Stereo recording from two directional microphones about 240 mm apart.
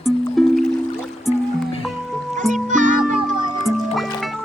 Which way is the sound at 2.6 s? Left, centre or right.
Right.